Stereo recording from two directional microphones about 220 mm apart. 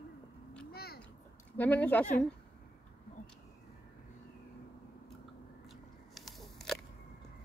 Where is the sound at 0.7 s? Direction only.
45° left (ahead or behind).